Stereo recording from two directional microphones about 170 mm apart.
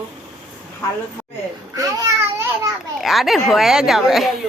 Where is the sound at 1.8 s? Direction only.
20° right (ahead or behind).